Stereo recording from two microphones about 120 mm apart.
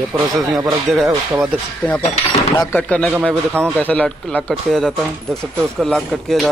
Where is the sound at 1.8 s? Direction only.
10° left (ahead or behind).